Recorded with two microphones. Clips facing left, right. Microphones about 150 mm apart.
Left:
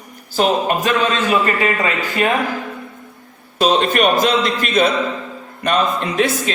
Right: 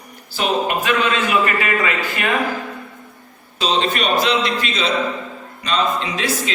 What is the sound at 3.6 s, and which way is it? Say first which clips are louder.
A man's voice: left 5 dB; 50° left (ahead or behind).